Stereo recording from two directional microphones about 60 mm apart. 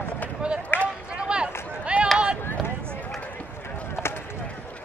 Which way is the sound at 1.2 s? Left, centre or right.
Centre.